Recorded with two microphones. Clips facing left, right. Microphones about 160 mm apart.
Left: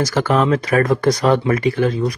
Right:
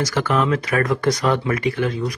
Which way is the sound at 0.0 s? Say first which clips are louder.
Left 3 dB; 35° left (ahead or behind).